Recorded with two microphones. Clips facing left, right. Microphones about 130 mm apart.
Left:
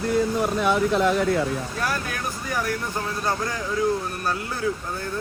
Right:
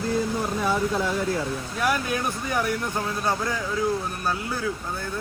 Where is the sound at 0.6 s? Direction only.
70° left (ahead or behind).